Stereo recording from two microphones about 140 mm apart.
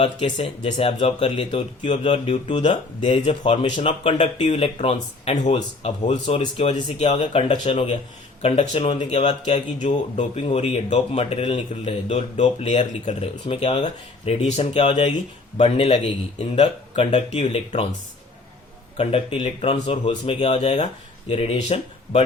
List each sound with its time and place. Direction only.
0.0 s a man's voice: 45° left (ahead or behind)
6.2 s speech: 35° left (ahead or behind)
7.0 s a man's voice: 50° left (ahead or behind)
9.8 s speech: 55° left (ahead or behind)
10.4 s a man's voice: 45° left (ahead or behind)
18.9 s a man's voice: 40° left (ahead or behind)